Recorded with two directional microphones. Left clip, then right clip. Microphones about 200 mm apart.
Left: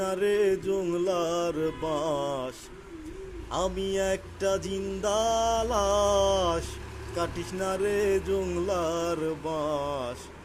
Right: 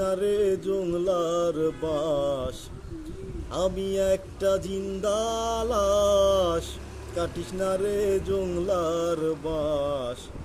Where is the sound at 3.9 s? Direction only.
10° right (ahead or behind).